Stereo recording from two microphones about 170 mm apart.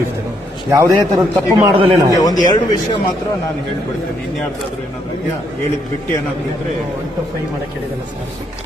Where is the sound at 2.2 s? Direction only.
20° left (ahead or behind).